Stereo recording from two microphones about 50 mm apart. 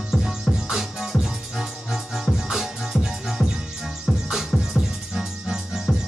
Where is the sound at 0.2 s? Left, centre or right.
Centre.